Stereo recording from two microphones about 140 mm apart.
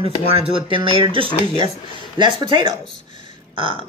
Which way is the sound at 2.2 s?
35° right (ahead or behind).